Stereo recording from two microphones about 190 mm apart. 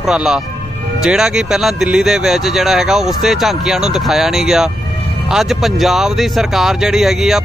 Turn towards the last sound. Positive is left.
turn(degrees=0)  # may be behind; listen again after turning